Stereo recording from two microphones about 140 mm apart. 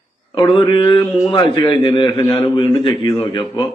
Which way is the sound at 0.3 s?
40° left (ahead or behind).